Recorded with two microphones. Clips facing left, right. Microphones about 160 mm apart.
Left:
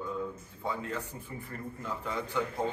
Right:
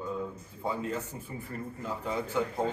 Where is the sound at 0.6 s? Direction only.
20° right (ahead or behind).